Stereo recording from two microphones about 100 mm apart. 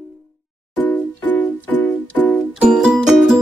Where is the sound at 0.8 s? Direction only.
15° left (ahead or behind).